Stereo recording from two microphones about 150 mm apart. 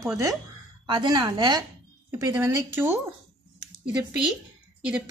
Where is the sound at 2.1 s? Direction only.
15° right (ahead or behind).